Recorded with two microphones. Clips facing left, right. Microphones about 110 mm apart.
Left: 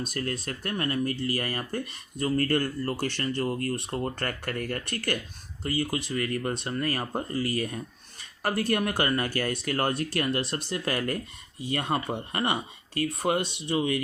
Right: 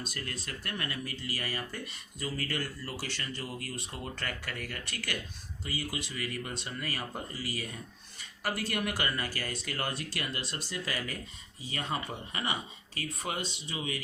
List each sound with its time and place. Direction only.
0.0 s speech: 50° left (ahead or behind)
13.7 s speech: 50° left (ahead or behind)